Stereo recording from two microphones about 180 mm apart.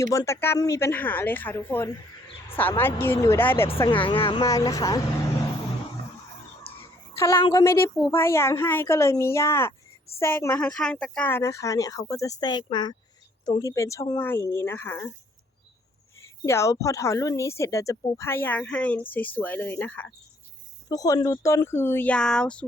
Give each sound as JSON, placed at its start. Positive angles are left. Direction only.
{"t": 0.0, "sound": "speech", "side_deg": 20}
{"t": 3.8, "sound": "speech", "side_deg": 30}
{"t": 4.4, "sound": "speech", "side_deg": 20}
{"t": 7.2, "sound": "speech", "side_deg": 15}
{"t": 16.2, "sound": "speech", "side_deg": 15}